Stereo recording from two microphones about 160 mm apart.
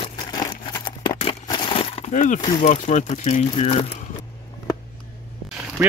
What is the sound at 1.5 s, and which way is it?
Crushing, 30° left (ahead or behind).